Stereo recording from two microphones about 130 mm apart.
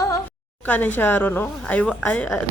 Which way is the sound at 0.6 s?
15° left (ahead or behind).